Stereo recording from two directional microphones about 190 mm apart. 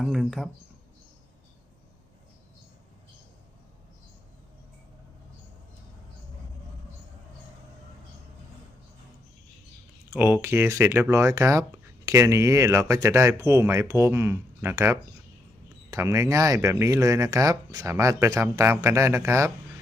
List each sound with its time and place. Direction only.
0.0 s speech: centre (ahead or behind)
10.1 s speech: 10° right (ahead or behind)